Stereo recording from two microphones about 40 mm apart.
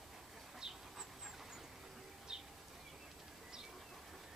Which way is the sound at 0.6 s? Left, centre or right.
Centre.